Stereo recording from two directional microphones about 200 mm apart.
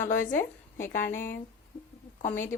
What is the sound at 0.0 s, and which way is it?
Speech, 40° left (ahead or behind).